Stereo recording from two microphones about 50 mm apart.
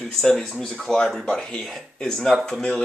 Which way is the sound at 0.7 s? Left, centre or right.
Centre.